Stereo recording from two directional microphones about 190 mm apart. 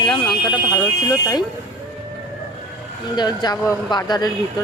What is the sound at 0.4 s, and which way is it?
Speech, 20° left (ahead or behind).